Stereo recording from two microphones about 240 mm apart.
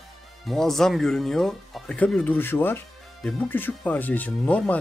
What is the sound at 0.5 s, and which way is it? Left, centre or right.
Speech, centre.